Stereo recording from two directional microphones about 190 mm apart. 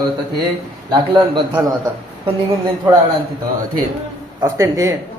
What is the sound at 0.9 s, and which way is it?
Speech, 25° right (ahead or behind).